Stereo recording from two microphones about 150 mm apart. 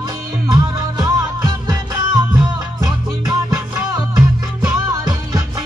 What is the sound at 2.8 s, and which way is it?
Music, 25° right (ahead or behind).